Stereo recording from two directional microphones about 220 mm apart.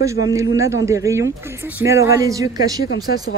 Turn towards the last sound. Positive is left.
turn(degrees=-15)  # may be behind; listen again after turning